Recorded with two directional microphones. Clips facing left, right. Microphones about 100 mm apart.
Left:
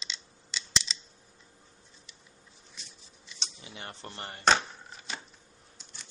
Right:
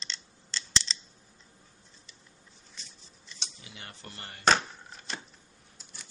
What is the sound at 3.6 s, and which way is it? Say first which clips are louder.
Speech: left 7 dB; 30° left (ahead or behind).